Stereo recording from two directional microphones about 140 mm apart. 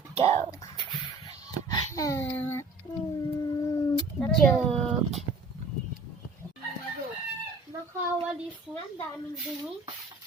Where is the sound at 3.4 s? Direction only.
25° left (ahead or behind).